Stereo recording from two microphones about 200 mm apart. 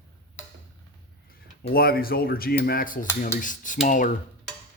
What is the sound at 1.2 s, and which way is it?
Speech, 50° left (ahead or behind).